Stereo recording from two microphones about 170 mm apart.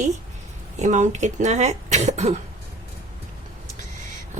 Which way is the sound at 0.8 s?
45° right (ahead or behind).